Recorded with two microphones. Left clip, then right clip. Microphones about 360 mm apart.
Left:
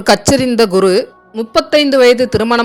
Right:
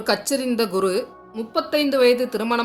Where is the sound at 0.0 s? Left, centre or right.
Right.